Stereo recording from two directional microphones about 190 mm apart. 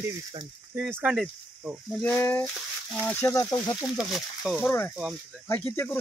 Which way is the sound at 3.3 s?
20° left (ahead or behind).